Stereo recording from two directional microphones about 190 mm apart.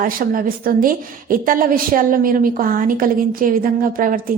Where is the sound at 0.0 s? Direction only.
45° right (ahead or behind).